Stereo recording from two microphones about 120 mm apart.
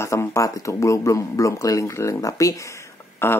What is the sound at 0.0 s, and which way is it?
Speech, 20° left (ahead or behind).